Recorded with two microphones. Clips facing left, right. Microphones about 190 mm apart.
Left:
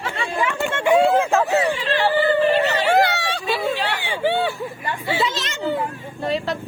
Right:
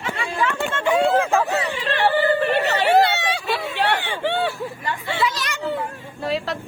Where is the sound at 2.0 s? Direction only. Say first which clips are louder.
Even; 60° right (ahead or behind).